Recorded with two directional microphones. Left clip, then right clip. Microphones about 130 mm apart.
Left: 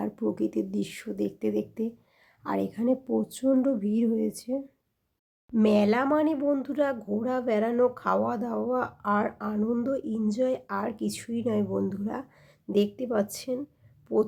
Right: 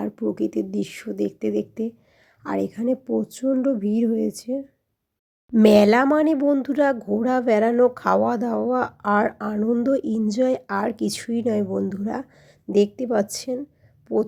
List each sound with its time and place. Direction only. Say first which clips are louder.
0.0 s speech: right 4 dB; 20° right (ahead or behind)
5.6 s speech: right 9 dB; 75° right (ahead or behind); by 9.6 s 45° right (ahead or behind)
9.6 s a woman's voice: right 6 dB; 30° right (ahead or behind)
9.8 s a woman's voice: right 7 dB; 50° right (ahead or behind)
14.1 s speech: right 3 dB; 25° right (ahead or behind)